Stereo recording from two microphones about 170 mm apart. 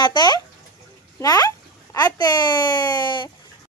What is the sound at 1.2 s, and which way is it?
Speech, 20° left (ahead or behind).